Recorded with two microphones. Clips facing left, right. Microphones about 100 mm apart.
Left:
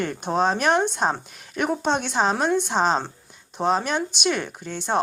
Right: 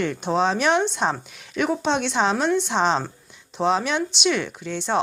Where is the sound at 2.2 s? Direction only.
5° left (ahead or behind).